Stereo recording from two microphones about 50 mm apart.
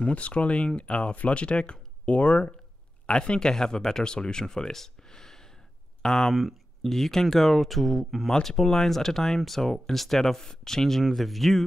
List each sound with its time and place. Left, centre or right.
0.0 s speech: left; by 11.6 s centre